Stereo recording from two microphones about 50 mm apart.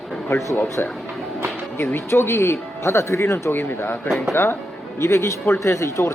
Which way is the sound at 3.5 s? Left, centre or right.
Left.